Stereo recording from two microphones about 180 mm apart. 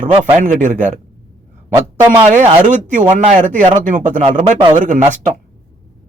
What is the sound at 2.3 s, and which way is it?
Speech, 45° right (ahead or behind).